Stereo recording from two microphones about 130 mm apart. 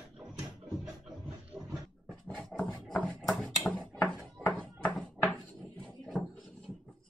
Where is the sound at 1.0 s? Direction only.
10° right (ahead or behind).